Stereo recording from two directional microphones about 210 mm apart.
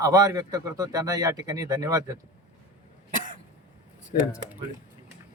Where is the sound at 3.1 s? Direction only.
40° right (ahead or behind).